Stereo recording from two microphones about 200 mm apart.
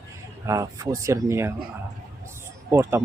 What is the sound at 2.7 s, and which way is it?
Speech, 15° right (ahead or behind).